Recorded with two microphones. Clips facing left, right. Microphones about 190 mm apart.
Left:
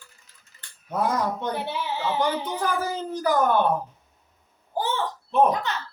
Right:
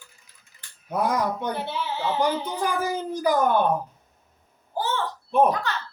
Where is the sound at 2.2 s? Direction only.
10° right (ahead or behind).